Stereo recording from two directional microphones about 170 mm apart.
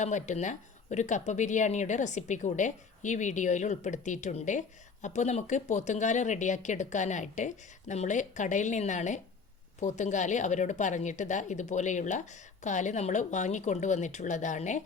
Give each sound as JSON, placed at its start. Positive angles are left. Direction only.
{"t": 0.0, "sound": "a woman's voice", "side_deg": 45}